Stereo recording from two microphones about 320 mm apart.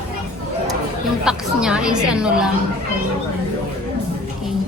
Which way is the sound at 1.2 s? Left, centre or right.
Centre.